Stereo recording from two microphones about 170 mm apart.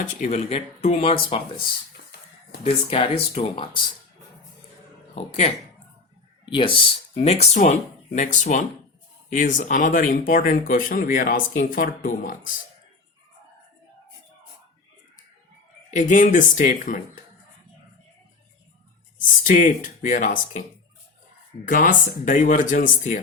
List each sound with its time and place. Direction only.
0.0 s speech: 40° left (ahead or behind)
2.6 s speech: 35° left (ahead or behind)
5.1 s speech: 40° left (ahead or behind)
6.4 s speech: 30° left (ahead or behind); by 12.5 s 50° left (ahead or behind)
15.9 s speech: 45° left (ahead or behind)
19.5 s speech: 50° left (ahead or behind)
21.6 s speech: 55° left (ahead or behind)